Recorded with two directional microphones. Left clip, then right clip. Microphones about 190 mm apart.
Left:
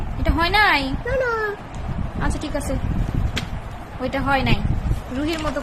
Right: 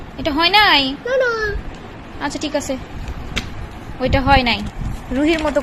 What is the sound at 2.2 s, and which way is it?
Speech, 10° right (ahead or behind).